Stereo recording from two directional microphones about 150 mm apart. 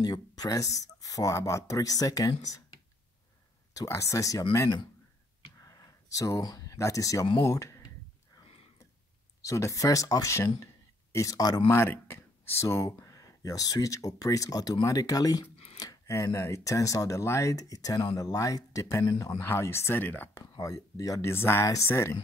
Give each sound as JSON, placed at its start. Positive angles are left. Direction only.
{"t": 0.0, "sound": "speech", "side_deg": 25}
{"t": 3.7, "sound": "speech", "side_deg": 20}
{"t": 5.6, "sound": "a sound", "side_deg": 20}
{"t": 7.4, "sound": "speech", "side_deg": 20}
{"t": 9.4, "sound": "speech", "side_deg": 20}
{"t": 20.5, "sound": "speech", "side_deg": 25}